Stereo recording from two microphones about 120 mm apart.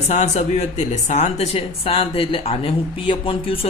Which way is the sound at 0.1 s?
65° left (ahead or behind).